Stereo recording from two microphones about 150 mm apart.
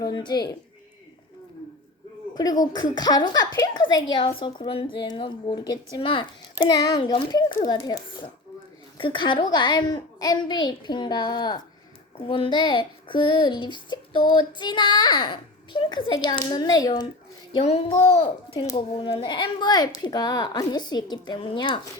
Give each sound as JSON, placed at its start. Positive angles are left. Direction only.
{"t": 0.0, "sound": "a woman's voice", "side_deg": 30}
{"t": 2.3, "sound": "a woman's voice", "side_deg": 25}
{"t": 17.6, "sound": "a child's voice", "side_deg": 45}